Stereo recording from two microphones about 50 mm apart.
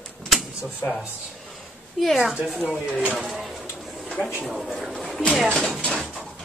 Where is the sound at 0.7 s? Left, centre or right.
Left.